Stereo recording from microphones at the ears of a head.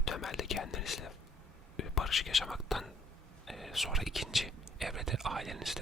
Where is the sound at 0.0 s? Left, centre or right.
Left.